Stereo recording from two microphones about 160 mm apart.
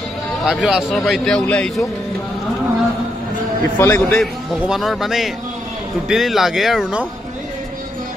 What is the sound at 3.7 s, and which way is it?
Speech, 15° left (ahead or behind).